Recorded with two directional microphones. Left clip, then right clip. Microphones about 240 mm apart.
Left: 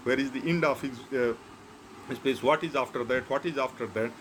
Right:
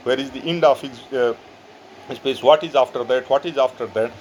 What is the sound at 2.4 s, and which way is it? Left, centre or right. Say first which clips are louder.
Speech: right 13 dB; right.